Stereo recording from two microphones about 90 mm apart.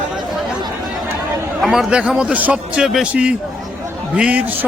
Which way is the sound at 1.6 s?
Centre (ahead or behind).